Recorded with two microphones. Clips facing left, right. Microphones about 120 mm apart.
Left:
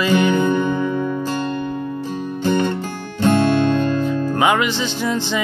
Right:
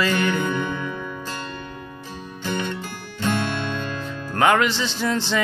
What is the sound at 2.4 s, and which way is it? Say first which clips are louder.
Music: left 8 dB; 40° left (ahead or behind).